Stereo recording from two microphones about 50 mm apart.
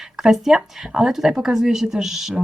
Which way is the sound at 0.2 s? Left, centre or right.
Centre.